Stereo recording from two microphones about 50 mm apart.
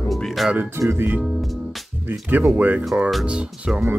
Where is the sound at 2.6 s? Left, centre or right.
Right.